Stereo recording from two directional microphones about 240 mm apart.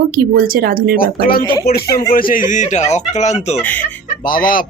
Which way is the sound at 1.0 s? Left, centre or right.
Left.